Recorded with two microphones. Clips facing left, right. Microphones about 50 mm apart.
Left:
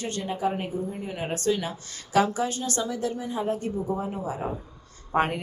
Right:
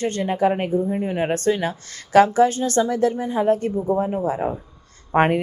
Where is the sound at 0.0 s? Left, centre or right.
Right.